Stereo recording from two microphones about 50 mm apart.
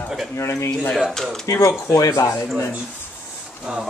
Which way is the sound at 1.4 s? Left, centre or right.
Left.